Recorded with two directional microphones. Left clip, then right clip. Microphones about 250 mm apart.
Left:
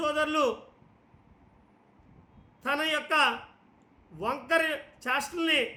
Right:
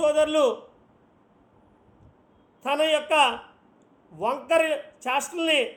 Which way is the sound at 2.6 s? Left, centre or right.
Centre.